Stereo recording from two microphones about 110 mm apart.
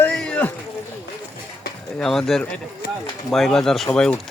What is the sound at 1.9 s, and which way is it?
Speech, 5° left (ahead or behind).